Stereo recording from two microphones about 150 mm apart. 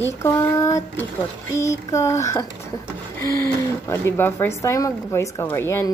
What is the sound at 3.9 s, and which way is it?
Speech, 15° left (ahead or behind).